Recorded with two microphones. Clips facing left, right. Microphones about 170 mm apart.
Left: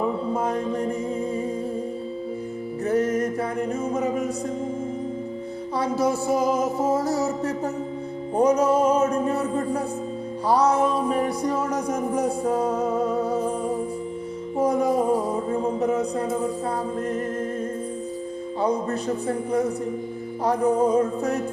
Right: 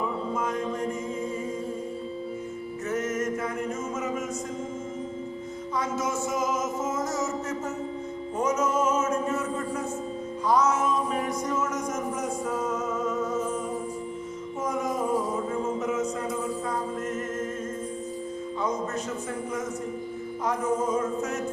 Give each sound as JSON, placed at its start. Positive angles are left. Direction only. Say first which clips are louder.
{"t": 0.3, "sound": "music", "louder": "left 4 dB", "side_deg": 35}
{"t": 2.8, "sound": "music", "louder": "left 6 dB", "side_deg": 35}
{"t": 5.7, "sound": "music", "louder": "left 6 dB", "side_deg": 35}
{"t": 10.4, "sound": "speech", "louder": "left 4 dB", "side_deg": 35}
{"t": 14.6, "sound": "music", "louder": "left 8 dB", "side_deg": 35}
{"t": 18.6, "sound": "music", "louder": "left 6 dB", "side_deg": 35}